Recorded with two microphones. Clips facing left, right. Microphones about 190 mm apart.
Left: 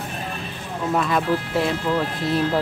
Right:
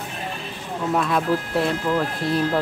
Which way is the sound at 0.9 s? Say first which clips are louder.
Even; centre (ahead or behind).